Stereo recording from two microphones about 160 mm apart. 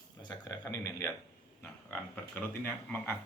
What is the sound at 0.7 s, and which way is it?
Speech, 20° left (ahead or behind).